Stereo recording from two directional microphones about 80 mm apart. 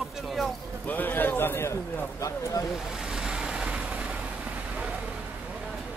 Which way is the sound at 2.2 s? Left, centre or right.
Left.